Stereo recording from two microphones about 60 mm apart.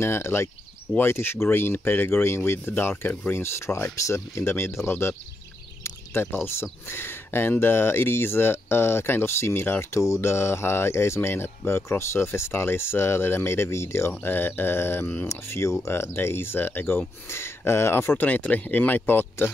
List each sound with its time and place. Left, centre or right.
0.0 s speech: left
9.8 s speech: left
14.2 s speech: left
16.2 s speech: left
18.2 s speech: left